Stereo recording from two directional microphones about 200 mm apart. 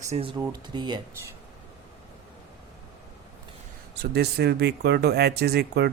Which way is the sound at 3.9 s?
55° right (ahead or behind).